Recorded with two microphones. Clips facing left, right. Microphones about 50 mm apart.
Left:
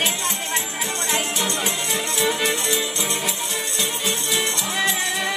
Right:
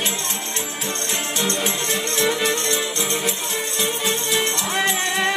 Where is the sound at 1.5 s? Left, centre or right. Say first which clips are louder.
Right 1 dB; centre.